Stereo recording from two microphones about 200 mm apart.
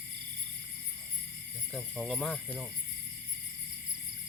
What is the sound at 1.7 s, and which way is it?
Speech, centre (ahead or behind).